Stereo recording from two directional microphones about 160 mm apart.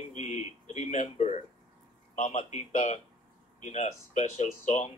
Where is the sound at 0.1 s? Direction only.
50° left (ahead or behind).